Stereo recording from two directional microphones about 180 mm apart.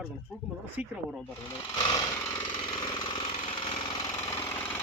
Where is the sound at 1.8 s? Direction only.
20° left (ahead or behind).